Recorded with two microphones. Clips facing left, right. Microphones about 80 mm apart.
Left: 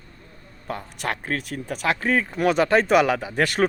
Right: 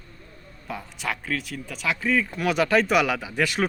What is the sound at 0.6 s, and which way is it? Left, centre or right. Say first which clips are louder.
Speech: left 2 dB; left.